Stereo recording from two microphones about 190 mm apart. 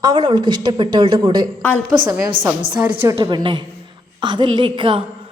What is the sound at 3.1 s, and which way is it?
A woman's voice, 25° right (ahead or behind).